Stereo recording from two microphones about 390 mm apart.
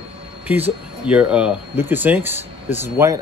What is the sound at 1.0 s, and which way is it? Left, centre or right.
Speech, centre.